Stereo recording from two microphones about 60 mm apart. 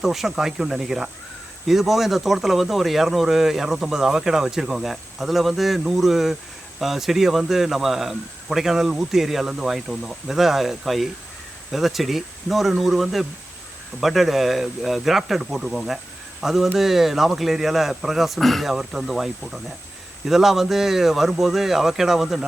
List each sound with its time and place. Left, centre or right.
0.0 s speech: centre